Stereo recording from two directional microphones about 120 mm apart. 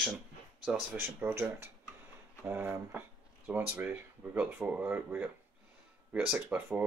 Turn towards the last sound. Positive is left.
turn(degrees=-10)  # may be behind; listen again after turning